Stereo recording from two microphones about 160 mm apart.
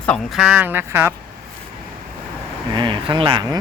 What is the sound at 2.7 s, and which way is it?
Speech, 30° right (ahead or behind).